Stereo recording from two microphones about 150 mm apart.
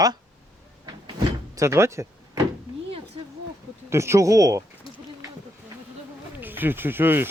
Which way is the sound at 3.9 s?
20° right (ahead or behind).